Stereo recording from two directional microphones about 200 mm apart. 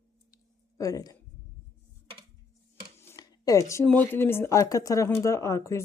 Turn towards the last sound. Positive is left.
turn(degrees=15)  # may be behind; listen again after turning